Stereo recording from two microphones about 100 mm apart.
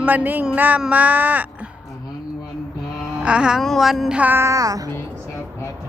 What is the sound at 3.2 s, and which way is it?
Speech, 10° right (ahead or behind).